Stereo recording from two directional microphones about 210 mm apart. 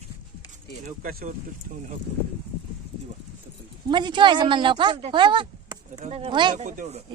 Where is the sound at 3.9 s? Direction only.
20° right (ahead or behind).